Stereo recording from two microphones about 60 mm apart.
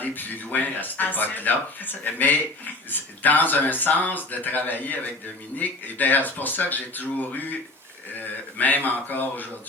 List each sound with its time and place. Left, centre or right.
0.0 s speech: left
8.5 s speech: left